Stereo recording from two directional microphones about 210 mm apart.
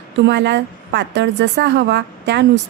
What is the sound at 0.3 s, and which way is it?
A woman's voice, 55° right (ahead or behind).